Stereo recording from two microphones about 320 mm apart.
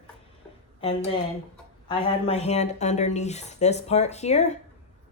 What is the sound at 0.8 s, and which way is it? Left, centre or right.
A woman's voice, centre.